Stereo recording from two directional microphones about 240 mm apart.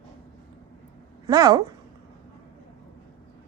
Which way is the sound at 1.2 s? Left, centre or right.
Centre.